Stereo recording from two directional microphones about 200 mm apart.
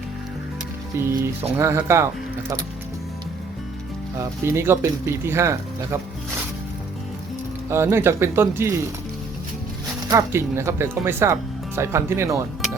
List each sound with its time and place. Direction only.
0.9 s speech: 10° right (ahead or behind)
4.2 s speech: 15° right (ahead or behind)
7.7 s speech: 15° right (ahead or behind)
10.1 s speech: 15° right (ahead or behind)